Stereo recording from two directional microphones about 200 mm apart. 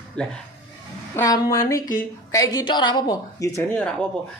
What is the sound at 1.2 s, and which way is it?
A woman's voice, 15° left (ahead or behind).